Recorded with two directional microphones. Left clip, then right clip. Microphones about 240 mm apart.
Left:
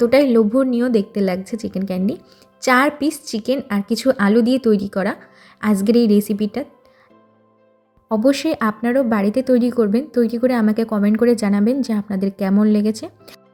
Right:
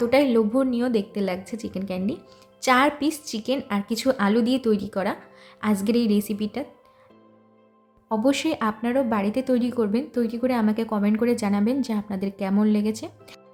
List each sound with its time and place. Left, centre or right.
0.0 s a woman's voice: centre
8.1 s a woman's voice: centre